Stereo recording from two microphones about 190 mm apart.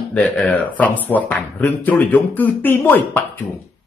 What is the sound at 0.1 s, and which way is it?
Speech, 5° left (ahead or behind).